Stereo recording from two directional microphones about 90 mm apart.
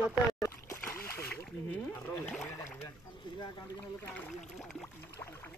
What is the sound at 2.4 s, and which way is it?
Speech, 30° left (ahead or behind).